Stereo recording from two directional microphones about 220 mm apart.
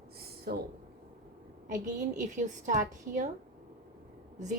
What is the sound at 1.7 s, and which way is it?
A woman's voice, 35° right (ahead or behind).